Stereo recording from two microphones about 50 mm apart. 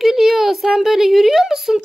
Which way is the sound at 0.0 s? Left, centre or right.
Centre.